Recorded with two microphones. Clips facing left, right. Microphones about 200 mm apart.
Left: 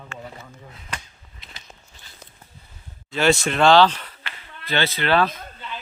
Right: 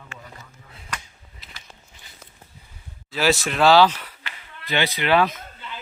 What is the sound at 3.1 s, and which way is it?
A man's voice, centre (ahead or behind).